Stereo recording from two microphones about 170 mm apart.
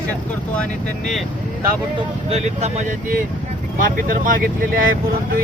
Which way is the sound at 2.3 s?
40° right (ahead or behind).